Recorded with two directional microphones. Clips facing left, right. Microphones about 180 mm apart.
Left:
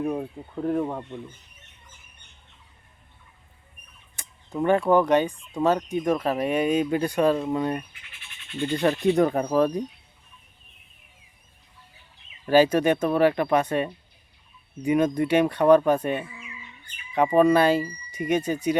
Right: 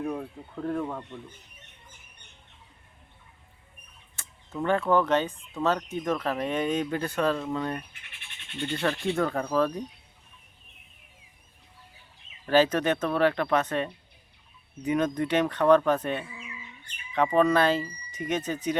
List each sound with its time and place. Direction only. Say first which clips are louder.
0.0 s speech: left 4 dB; 20° left (ahead or behind)
4.1 s fowl: left 2 dB; 15° left (ahead or behind)
4.6 s speech: left 4 dB; 15° left (ahead or behind)
12.5 s speech: left 4 dB; 10° left (ahead or behind)
17.3 s speech: left 4 dB; 10° left (ahead or behind)